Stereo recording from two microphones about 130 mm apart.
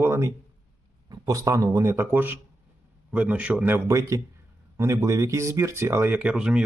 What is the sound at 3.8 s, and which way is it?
Speech, 25° right (ahead or behind).